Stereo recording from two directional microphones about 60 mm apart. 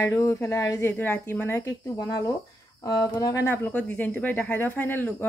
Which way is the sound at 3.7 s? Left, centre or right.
Left.